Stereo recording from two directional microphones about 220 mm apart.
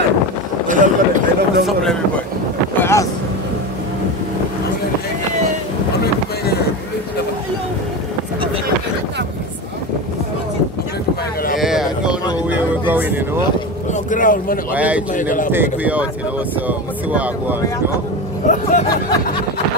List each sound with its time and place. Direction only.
0.7 s chatter: 35° right (ahead or behind)
2.8 s vehicle: 10° left (ahead or behind)
11.6 s a sound: centre (ahead or behind)
12.4 s vehicle: 10° right (ahead or behind)
14.1 s speech: 40° left (ahead or behind)
14.7 s speech: 5° right (ahead or behind)
15.1 s speech: 35° left (ahead or behind)
15.5 s speech: 10° right (ahead or behind)
18.5 s speech: 35° left (ahead or behind)